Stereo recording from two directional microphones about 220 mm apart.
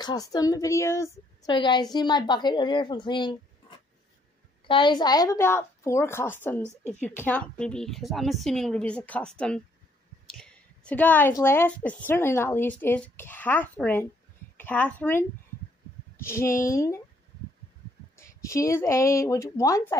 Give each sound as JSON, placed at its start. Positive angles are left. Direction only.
{"t": 0.0, "sound": "a woman's voice", "side_deg": 20}
{"t": 18.1, "sound": "a woman's voice", "side_deg": 15}